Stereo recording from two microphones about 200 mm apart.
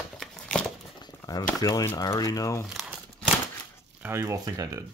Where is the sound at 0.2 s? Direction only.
5° left (ahead or behind).